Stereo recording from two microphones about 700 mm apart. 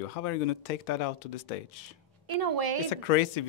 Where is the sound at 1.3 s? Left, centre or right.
Left.